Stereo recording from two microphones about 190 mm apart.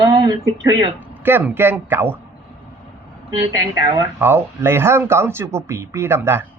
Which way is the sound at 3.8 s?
20° right (ahead or behind).